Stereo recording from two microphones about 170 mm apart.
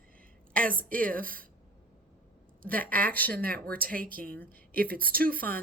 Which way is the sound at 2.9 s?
55° right (ahead or behind).